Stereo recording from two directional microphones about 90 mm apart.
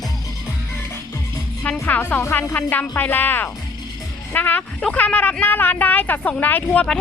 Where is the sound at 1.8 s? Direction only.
20° left (ahead or behind).